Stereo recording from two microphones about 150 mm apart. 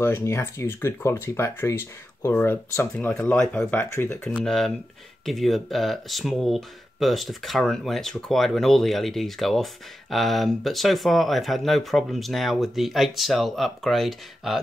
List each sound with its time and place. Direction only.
0.0 s speech: 15° left (ahead or behind)
4.5 s speech: centre (ahead or behind)